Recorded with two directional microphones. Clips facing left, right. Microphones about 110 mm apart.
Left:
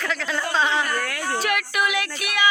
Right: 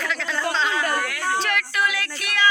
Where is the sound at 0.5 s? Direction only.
20° left (ahead or behind).